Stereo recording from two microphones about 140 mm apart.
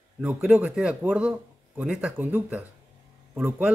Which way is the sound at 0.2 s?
10° right (ahead or behind).